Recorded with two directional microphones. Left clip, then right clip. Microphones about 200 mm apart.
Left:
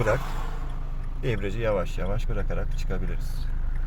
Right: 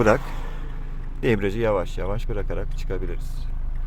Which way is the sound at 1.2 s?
45° right (ahead or behind).